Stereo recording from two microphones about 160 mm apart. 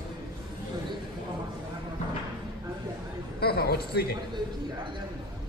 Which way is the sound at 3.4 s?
80° left.